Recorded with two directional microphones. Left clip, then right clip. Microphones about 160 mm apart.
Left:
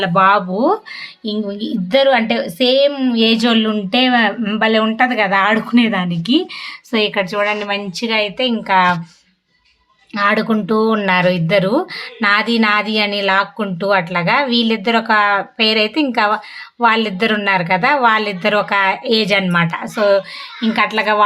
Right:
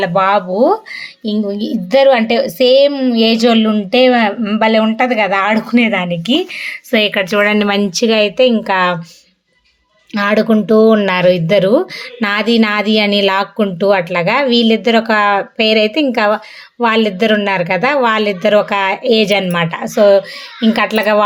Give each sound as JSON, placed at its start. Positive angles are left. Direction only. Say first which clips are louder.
{"t": 0.0, "sound": "speech", "louder": "even", "side_deg": -10}
{"t": 7.4, "sound": "speech", "louder": "right 5 dB", "side_deg": -60}
{"t": 10.2, "sound": "speech", "louder": "right 2 dB", "side_deg": -15}